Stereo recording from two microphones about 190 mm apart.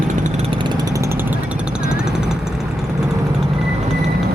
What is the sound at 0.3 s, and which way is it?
Vehicle, 25° right (ahead or behind).